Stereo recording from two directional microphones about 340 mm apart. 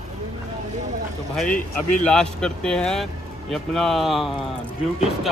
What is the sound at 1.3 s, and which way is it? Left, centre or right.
Speech, centre.